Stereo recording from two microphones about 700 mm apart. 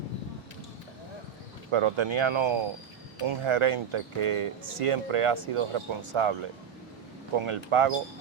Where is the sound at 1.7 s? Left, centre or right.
Right.